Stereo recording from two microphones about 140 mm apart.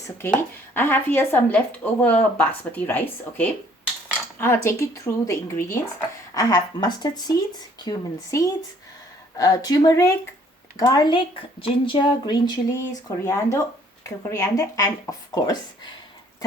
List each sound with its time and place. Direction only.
0.2 s a woman's voice: 15° left (ahead or behind)